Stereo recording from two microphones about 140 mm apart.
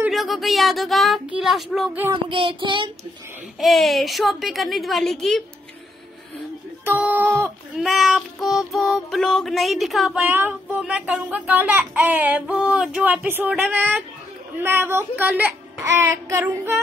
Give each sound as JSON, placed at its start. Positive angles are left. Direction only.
{"t": 0.1, "sound": "child singing", "side_deg": 0}
{"t": 2.2, "sound": "child singing", "side_deg": -40}
{"t": 3.5, "sound": "child singing", "side_deg": 0}
{"t": 6.8, "sound": "a sound", "side_deg": -15}
{"t": 7.7, "sound": "child singing", "side_deg": 0}
{"t": 10.2, "sound": "speech", "side_deg": -15}